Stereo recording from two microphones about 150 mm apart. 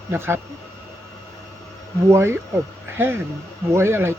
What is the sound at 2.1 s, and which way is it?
Speech, 15° right (ahead or behind).